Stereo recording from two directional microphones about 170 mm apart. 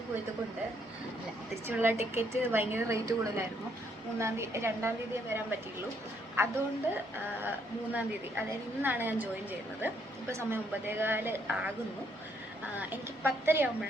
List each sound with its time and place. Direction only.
1.6 s a woman's voice: 15° right (ahead or behind)
7.9 s a woman's voice: 10° right (ahead or behind)
12.7 s a woman's voice: 10° right (ahead or behind)